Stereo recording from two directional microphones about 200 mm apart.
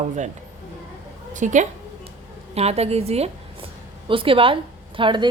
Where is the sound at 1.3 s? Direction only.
40° right (ahead or behind).